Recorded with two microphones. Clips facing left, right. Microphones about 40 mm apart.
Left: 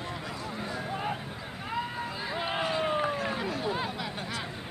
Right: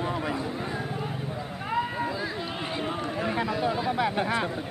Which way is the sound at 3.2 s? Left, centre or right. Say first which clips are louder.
Right 5 dB; centre.